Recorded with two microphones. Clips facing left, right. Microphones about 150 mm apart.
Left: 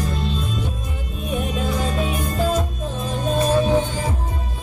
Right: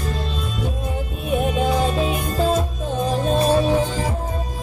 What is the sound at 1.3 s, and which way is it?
Music, 30° right (ahead or behind).